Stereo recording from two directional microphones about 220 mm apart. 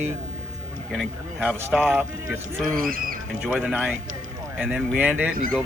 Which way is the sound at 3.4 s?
5° right (ahead or behind).